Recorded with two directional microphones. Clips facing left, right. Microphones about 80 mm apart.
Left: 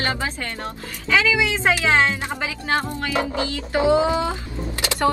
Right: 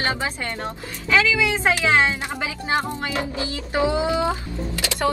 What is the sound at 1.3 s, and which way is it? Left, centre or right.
Speech, left.